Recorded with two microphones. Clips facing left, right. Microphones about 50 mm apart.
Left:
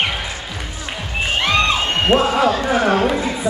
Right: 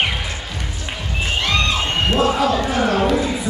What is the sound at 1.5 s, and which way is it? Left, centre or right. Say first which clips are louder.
Cheering: left 3 dB; left.